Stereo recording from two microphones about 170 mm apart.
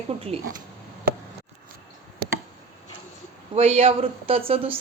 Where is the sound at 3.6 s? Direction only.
35° right (ahead or behind).